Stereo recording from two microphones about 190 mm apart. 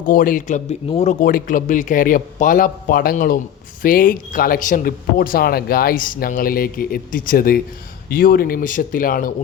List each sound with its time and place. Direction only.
0.0 s speech: 45° left (ahead or behind)
1.2 s speech: 45° left (ahead or behind)